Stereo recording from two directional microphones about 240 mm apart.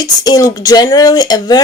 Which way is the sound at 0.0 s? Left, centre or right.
Centre.